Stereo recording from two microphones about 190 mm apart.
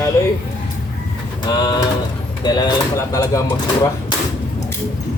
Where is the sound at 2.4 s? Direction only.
20° left (ahead or behind).